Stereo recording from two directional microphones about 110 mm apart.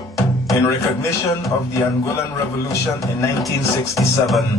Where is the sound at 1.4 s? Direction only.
25° left (ahead or behind).